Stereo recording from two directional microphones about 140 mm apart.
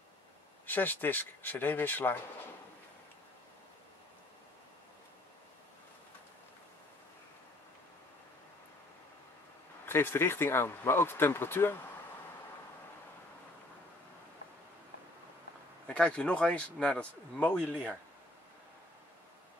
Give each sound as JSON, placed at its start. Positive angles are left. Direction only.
{"t": 0.7, "sound": "speech", "side_deg": 15}
{"t": 9.8, "sound": "speech", "side_deg": 15}
{"t": 15.9, "sound": "speech", "side_deg": 10}